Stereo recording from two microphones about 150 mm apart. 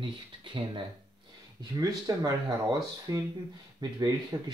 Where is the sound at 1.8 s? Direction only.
25° right (ahead or behind).